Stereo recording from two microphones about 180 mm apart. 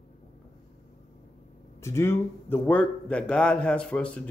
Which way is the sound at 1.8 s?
15° left (ahead or behind).